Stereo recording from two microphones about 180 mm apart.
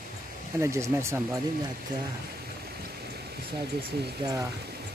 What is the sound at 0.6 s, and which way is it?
Speech, 15° right (ahead or behind).